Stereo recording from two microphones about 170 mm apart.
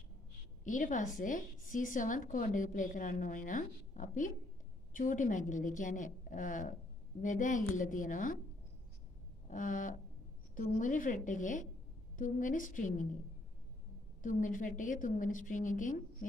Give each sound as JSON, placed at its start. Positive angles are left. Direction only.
{"t": 0.7, "sound": "a woman's voice", "side_deg": 50}
{"t": 9.5, "sound": "a woman's voice", "side_deg": 50}
{"t": 14.2, "sound": "a woman's voice", "side_deg": 50}